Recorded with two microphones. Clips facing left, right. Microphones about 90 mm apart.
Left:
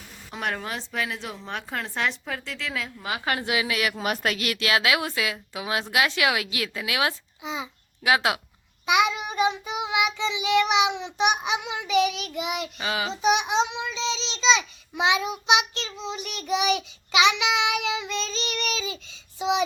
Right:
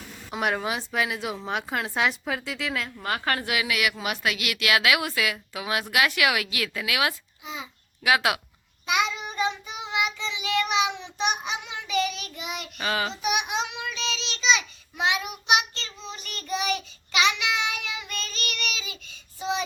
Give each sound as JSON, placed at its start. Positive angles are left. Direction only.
{"t": 0.3, "sound": "a woman's voice", "side_deg": -5}
{"t": 8.9, "sound": "child singing", "side_deg": 15}
{"t": 13.3, "sound": "a child's voice", "side_deg": 25}
{"t": 18.7, "sound": "child singing", "side_deg": 30}
{"t": 19.4, "sound": "child singing", "side_deg": 15}